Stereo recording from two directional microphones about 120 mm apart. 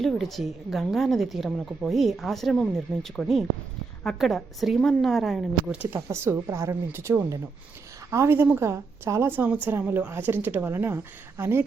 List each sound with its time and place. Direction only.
0.0 s a woman's voice: centre (ahead or behind)
5.7 s a woman's voice: 10° right (ahead or behind)
6.1 s a woman's voice: 20° right (ahead or behind)